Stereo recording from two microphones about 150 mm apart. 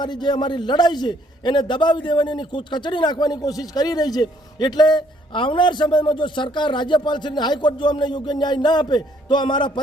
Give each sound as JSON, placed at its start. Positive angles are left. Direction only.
{"t": 0.0, "sound": "a man's voice", "side_deg": 30}